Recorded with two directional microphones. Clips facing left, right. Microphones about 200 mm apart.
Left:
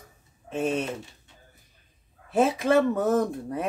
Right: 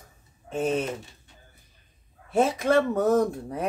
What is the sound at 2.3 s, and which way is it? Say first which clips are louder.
Speech: even; 5° left (ahead or behind).